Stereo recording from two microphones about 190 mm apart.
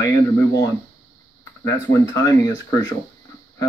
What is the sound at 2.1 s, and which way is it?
Speech, 15° left (ahead or behind).